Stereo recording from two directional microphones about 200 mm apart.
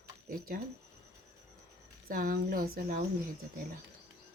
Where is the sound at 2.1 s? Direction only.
45° right (ahead or behind).